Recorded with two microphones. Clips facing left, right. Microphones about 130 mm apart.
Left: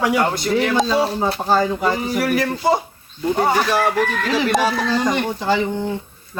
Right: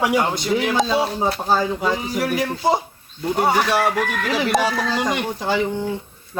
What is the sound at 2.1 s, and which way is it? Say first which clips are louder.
Speech: left 2 dB; 15° right (ahead or behind).